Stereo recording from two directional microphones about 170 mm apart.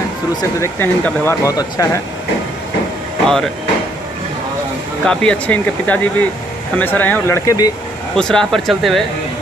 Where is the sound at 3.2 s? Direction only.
Centre (ahead or behind).